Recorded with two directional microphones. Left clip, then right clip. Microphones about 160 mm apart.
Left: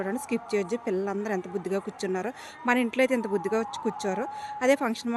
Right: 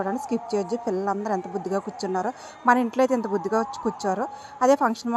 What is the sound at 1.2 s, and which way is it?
Speech, 5° right (ahead or behind).